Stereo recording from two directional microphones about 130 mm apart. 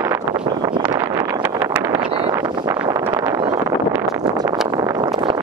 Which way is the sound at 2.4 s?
35° right (ahead or behind).